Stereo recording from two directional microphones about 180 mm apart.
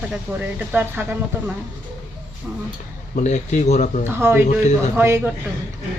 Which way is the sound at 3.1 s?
40° left (ahead or behind).